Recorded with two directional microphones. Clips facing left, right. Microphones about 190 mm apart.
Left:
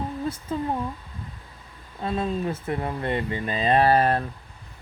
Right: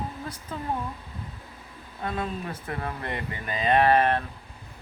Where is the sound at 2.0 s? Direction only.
25° left (ahead or behind).